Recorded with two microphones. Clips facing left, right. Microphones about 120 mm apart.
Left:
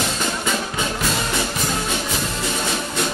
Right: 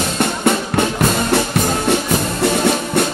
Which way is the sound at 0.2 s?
65° right (ahead or behind).